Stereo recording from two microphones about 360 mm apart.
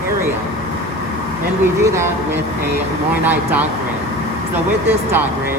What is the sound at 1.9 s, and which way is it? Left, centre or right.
Speech, centre.